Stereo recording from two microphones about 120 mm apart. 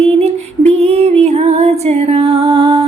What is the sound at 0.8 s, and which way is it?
Music, 60° right (ahead or behind).